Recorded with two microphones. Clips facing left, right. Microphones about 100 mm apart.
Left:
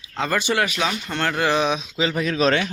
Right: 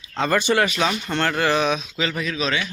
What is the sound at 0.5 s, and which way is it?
Speech, 5° left (ahead or behind).